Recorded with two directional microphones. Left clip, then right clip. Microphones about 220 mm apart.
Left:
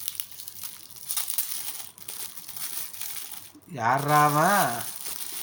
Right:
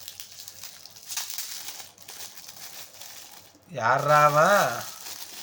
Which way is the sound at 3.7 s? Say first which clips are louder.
Right 2 dB; 15° right (ahead or behind).